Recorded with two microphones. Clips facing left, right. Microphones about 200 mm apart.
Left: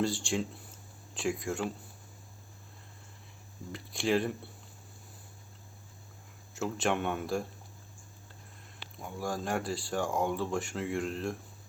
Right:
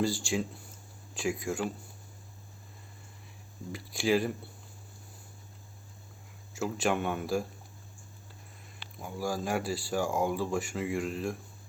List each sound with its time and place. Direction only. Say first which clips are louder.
0.0 s speech: right 1 dB; centre (ahead or behind)
3.7 s speech: right 2 dB; 5° right (ahead or behind)
6.5 s speech: right 1 dB; centre (ahead or behind)
9.0 s speech: right 2 dB; 5° right (ahead or behind)